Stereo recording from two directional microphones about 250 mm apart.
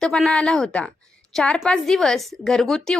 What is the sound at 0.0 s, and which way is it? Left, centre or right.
A woman's voice, centre.